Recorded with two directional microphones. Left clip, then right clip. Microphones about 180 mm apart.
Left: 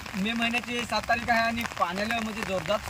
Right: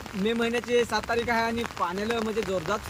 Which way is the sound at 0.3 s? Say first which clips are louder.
Right 3 dB; 10° right (ahead or behind).